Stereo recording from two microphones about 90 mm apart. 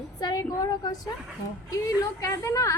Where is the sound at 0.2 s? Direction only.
45° left (ahead or behind).